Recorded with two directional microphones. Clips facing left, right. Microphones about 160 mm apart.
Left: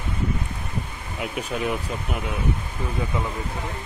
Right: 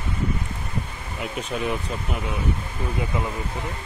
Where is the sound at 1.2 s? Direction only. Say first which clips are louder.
Left 1 dB; centre (ahead or behind).